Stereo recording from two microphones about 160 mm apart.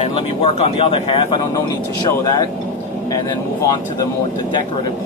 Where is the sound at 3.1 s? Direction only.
20° left (ahead or behind).